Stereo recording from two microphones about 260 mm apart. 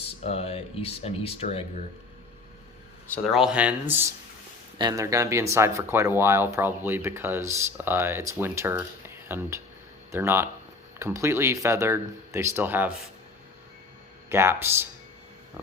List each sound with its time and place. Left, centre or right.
0.0 s speech: left
3.3 s speech: centre
14.3 s speech: centre